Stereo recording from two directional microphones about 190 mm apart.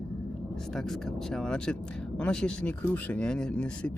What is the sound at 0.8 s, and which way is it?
Speech, centre (ahead or behind).